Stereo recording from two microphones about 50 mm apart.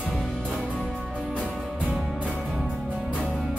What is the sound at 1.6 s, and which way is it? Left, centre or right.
Music, right.